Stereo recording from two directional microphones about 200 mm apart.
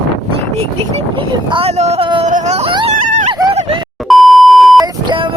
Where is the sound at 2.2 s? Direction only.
40° right (ahead or behind).